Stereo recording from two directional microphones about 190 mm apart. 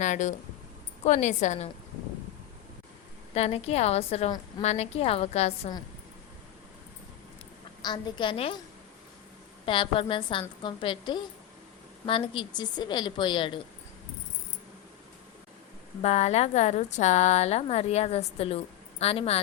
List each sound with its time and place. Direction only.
0.0 s a woman's voice: 40° left (ahead or behind)
3.3 s a woman's voice: 35° left (ahead or behind)
7.8 s a woman's voice: 20° left (ahead or behind)
9.6 s a woman's voice: 25° left (ahead or behind)
16.0 s a woman's voice: 35° left (ahead or behind)